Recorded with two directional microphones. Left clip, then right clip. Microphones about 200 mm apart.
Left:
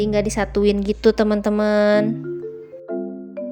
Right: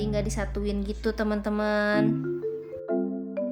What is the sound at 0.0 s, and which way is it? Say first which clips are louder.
A woman's voice: left 10 dB; 35° left (ahead or behind).